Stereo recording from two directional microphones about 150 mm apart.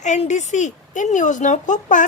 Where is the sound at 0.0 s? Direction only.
50° left (ahead or behind).